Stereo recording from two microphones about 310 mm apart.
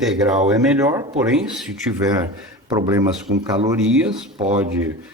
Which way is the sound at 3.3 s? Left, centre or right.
Right.